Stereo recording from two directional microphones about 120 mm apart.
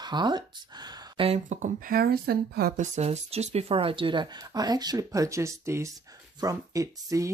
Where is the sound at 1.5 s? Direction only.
80° right.